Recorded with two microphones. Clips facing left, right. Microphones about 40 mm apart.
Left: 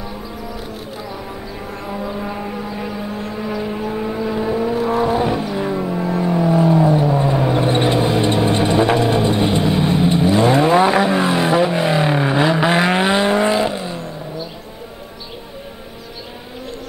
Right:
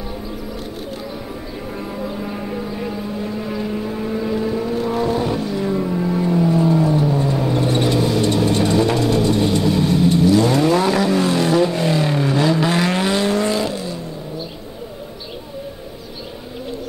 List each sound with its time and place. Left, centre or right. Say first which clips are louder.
3.3 s vehicle: left 1 dB; centre
4.7 s vehicle: left 3 dB; centre
5.0 s vehicle: left 2 dB; left